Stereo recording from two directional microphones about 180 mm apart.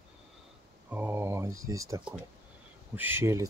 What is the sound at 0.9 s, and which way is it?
Speech, 10° right (ahead or behind).